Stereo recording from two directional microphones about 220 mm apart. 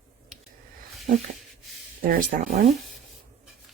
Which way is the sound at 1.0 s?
35° right (ahead or behind).